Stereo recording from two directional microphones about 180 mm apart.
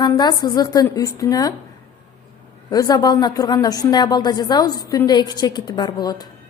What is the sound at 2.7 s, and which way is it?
A woman's voice, 20° left (ahead or behind).